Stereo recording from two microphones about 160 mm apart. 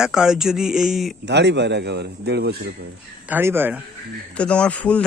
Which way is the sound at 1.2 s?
90° right.